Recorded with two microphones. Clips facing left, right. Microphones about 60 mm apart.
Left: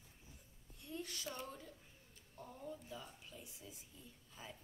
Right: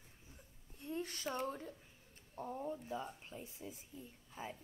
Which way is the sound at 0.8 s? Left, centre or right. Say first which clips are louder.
Right 5 dB; right.